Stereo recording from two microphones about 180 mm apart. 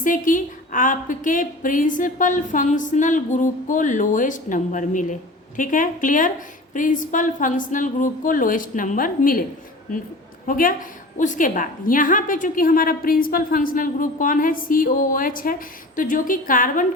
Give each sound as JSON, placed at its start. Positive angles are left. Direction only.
{"t": 0.0, "sound": "a woman's voice", "side_deg": 45}